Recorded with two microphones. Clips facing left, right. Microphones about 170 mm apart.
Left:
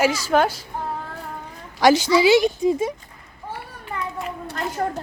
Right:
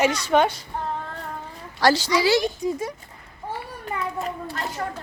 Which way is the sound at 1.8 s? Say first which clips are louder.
Left 4 dB; 20° left (ahead or behind).